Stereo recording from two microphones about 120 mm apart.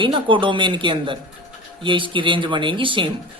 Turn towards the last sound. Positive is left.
turn(degrees=-45)  # may be behind; listen again after turning